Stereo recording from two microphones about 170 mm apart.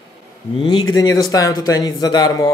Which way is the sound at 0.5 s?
30° left (ahead or behind).